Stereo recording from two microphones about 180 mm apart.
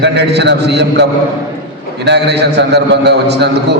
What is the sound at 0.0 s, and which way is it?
A man's voice, 70° right (ahead or behind).